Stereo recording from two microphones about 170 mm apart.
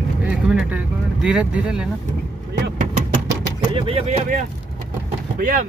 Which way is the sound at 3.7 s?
35° right (ahead or behind).